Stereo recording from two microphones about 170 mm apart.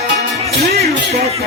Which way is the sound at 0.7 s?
40° right (ahead or behind).